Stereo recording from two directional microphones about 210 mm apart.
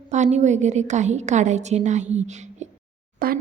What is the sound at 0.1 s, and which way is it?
A woman's voice, 35° right (ahead or behind).